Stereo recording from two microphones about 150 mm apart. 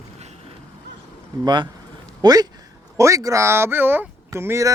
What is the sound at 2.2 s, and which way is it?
Speech, 25° right (ahead or behind).